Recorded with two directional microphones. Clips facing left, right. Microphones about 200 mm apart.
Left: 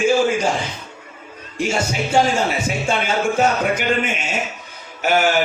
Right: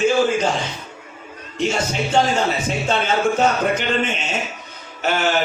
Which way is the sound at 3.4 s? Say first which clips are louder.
Even; 10° left (ahead or behind).